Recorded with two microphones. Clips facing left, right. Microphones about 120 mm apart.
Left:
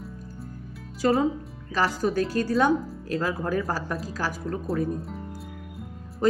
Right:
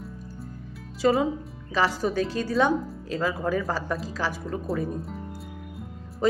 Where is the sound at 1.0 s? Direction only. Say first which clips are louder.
Even; centre (ahead or behind).